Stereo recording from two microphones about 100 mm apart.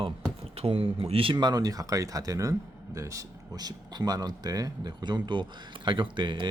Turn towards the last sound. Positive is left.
turn(degrees=-50)  # may be behind; listen again after turning